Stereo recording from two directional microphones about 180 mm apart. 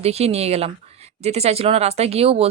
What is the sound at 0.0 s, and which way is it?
Speech, 35° right (ahead or behind).